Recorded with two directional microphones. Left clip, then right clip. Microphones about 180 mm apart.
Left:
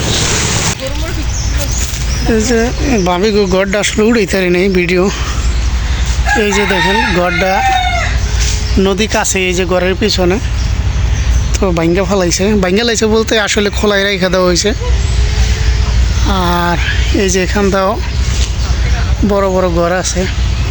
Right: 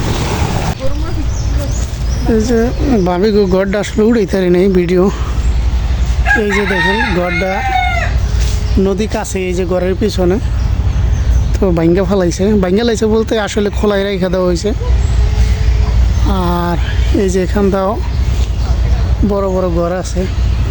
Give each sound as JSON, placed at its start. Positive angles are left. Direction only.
{"t": 0.0, "sound": "vehicle", "side_deg": -65}
{"t": 2.4, "sound": "speech", "side_deg": -20}
{"t": 6.4, "sound": "speech", "side_deg": -10}
{"t": 8.8, "sound": "speech", "side_deg": -5}
{"t": 11.6, "sound": "speech", "side_deg": -20}
{"t": 16.2, "sound": "speech", "side_deg": -15}
{"t": 19.3, "sound": "speech", "side_deg": 10}